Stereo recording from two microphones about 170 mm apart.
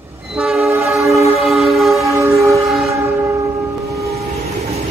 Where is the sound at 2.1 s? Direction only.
15° right (ahead or behind).